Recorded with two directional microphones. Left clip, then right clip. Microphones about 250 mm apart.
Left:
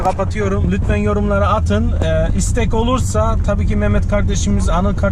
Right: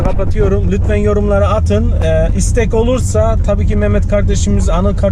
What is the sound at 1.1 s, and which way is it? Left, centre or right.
Speech, left.